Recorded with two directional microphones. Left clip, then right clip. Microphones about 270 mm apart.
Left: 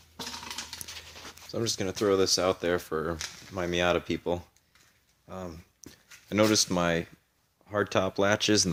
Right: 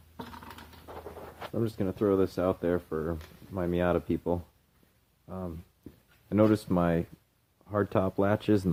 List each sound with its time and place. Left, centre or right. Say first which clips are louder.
1.5 s speech: left 2 dB; centre
3.5 s speech: left 2 dB; centre
6.2 s speech: left 1 dB; centre